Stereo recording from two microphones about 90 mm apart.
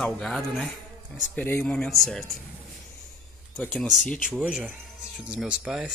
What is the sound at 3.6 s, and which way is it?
Speech, 10° left (ahead or behind).